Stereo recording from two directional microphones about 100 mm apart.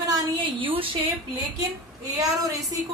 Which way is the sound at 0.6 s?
60° right (ahead or behind).